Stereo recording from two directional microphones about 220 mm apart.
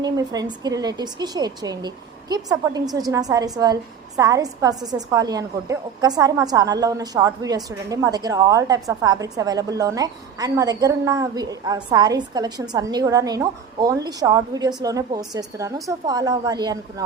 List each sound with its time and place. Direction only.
0.0 s a woman's voice: 20° right (ahead or behind)